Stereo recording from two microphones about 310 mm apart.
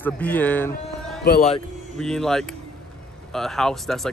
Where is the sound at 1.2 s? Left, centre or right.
Left.